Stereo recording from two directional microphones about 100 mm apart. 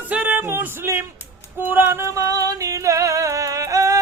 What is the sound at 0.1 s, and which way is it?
Music, 15° right (ahead or behind).